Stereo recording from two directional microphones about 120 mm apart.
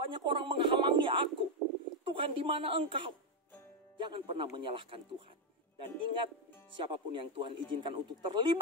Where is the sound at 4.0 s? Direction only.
45° right (ahead or behind).